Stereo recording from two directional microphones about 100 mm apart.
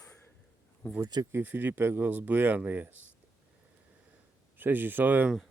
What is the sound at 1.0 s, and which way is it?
Speech, 40° right (ahead or behind).